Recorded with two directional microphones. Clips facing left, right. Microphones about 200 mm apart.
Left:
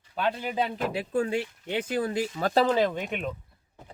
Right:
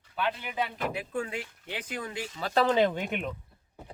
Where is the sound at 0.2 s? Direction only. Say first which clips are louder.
Left 4 dB; 40° left (ahead or behind).